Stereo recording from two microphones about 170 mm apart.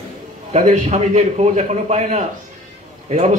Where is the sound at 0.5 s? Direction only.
40° right (ahead or behind).